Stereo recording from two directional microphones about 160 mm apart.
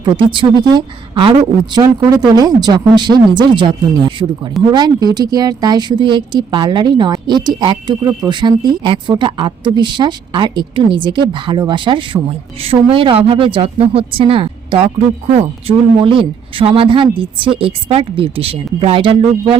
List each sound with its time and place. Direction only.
0.0 s speech: 30° right (ahead or behind)